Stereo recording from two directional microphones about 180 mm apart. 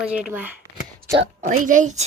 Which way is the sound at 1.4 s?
45° right (ahead or behind).